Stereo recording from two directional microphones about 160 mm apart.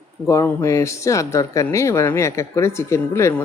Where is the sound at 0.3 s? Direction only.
15° left (ahead or behind).